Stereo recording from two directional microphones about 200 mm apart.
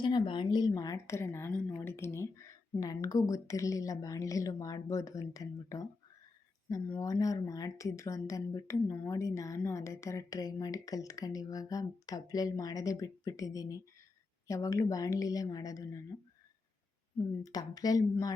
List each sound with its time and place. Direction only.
0.0 s speech: 25° left (ahead or behind)
17.4 s speech: 20° left (ahead or behind)